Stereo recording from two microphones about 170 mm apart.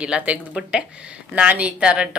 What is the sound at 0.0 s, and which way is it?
Speech, 5° right (ahead or behind).